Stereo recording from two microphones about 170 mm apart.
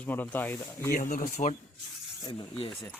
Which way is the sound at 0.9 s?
50° left (ahead or behind).